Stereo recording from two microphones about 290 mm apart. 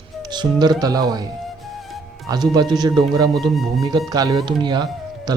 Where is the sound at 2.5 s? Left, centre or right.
Centre.